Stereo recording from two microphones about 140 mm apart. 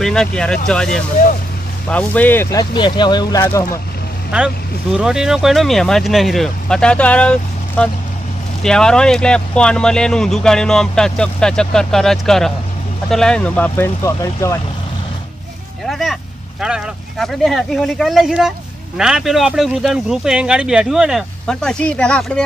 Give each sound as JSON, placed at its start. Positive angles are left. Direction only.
{"t": 0.0, "sound": "speech", "side_deg": 5}
{"t": 2.6, "sound": "speech", "side_deg": 35}
{"t": 4.9, "sound": "speech", "side_deg": -5}
{"t": 14.0, "sound": "speech", "side_deg": 20}
{"t": 15.8, "sound": "vehicle", "side_deg": 0}
{"t": 16.6, "sound": "speech", "side_deg": -5}